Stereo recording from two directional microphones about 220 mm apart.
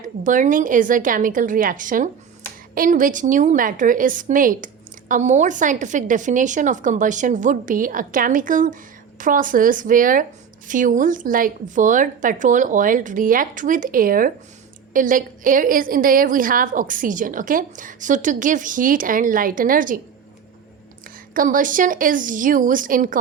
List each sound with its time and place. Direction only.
0.3 s a woman's voice: 35° right (ahead or behind)
21.3 s a woman's voice: 35° right (ahead or behind)